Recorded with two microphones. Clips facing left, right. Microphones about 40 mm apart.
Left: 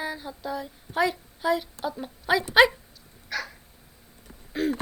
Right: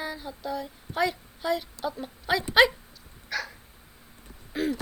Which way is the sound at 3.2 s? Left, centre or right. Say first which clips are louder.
Even; centre.